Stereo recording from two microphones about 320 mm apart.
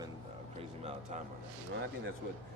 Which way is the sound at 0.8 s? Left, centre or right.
Centre.